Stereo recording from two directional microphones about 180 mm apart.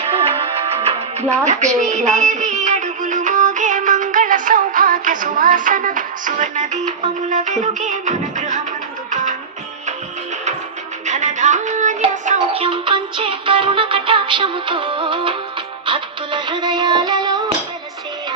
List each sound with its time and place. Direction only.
0.0 s music: 30° right (ahead or behind)
11.0 s music: 40° right (ahead or behind)
12.6 s music: 25° right (ahead or behind)